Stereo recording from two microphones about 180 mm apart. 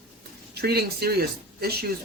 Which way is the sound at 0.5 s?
60° right (ahead or behind).